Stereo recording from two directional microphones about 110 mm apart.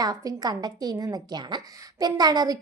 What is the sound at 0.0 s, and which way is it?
A woman's voice, 35° right (ahead or behind).